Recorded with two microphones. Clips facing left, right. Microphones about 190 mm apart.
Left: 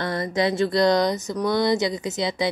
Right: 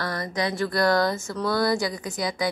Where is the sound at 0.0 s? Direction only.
25° left (ahead or behind).